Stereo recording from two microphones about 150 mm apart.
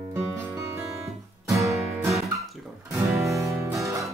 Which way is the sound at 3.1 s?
20° right (ahead or behind).